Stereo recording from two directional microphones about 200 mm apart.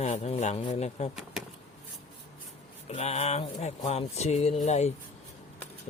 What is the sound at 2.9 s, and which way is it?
Speech, 35° left (ahead or behind).